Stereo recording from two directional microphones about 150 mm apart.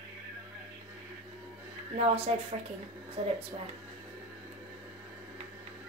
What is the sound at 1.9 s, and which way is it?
Speech, 40° right (ahead or behind).